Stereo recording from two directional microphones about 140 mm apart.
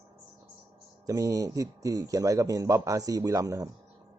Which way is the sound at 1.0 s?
25° right (ahead or behind).